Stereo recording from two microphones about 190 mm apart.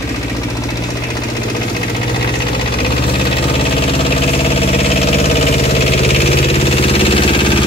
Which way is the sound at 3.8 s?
30° left (ahead or behind).